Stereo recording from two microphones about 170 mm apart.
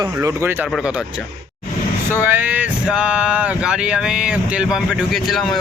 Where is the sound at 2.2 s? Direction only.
10° right (ahead or behind).